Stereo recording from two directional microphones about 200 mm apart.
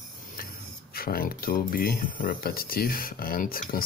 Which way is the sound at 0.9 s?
50° left (ahead or behind).